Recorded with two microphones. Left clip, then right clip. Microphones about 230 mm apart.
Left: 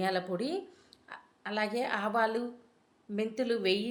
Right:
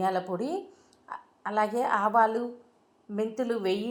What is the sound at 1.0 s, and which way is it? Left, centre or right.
A woman's voice, centre.